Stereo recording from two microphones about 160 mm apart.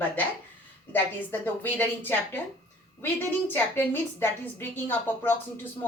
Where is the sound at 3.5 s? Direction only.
10° left (ahead or behind).